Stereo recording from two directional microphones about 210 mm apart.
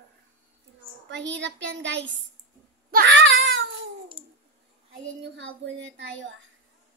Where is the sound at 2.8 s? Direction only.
50° right (ahead or behind).